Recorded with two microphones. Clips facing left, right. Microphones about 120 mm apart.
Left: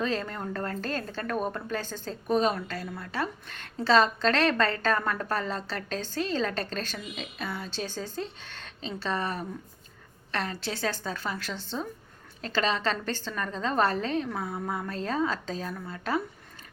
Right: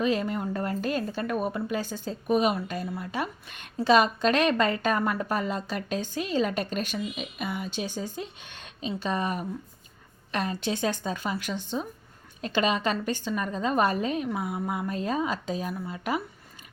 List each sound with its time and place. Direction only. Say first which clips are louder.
0.0 s a woman's voice: right 4 dB; 10° right (ahead or behind)